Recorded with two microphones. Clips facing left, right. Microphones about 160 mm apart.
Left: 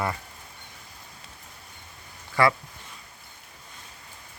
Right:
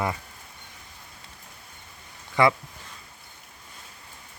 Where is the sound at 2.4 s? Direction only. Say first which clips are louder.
Right 1 dB; 20° right (ahead or behind).